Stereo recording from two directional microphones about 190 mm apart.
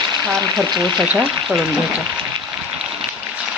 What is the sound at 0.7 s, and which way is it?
Speech, 25° right (ahead or behind).